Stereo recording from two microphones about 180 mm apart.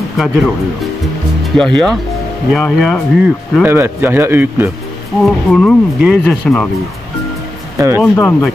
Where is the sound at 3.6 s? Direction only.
10° right (ahead or behind).